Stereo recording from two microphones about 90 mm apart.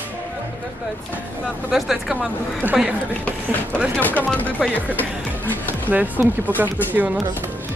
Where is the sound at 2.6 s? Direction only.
20° right (ahead or behind).